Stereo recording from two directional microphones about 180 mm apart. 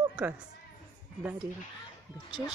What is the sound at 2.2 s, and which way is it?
Speech, 25° left (ahead or behind).